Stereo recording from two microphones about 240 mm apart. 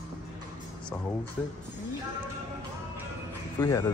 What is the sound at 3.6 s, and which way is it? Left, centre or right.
Speech, centre.